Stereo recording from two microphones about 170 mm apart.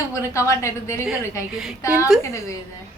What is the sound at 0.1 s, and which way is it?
A woman's voice, 15° left (ahead or behind).